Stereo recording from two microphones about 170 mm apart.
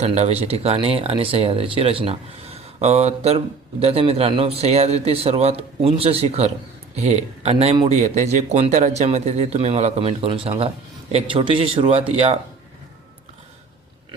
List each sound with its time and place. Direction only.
0.0 s speech: 40° right (ahead or behind)